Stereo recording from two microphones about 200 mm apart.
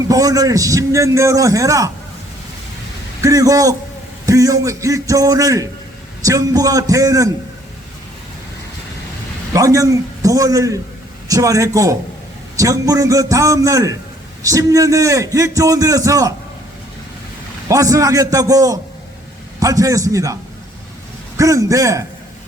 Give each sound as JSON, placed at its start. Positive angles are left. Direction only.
{"t": 0.1, "sound": "a man's voice", "side_deg": -15}
{"t": 3.2, "sound": "a man's voice", "side_deg": -15}
{"t": 9.5, "sound": "a man's voice", "side_deg": -15}
{"t": 17.7, "sound": "a man's voice", "side_deg": -15}